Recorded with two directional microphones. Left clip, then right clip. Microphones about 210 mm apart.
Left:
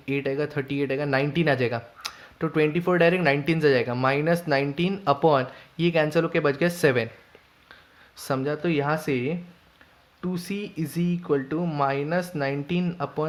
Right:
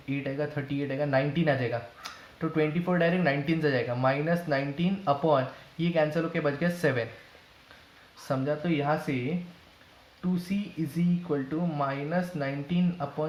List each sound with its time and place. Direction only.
0.1 s speech: 50° left (ahead or behind)
8.3 s speech: 55° left (ahead or behind)
10.9 s speech: 55° left (ahead or behind)